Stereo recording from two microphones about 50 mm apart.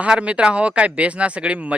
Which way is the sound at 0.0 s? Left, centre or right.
Right.